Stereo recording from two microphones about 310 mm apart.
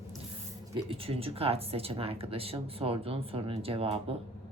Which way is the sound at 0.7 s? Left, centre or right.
Centre.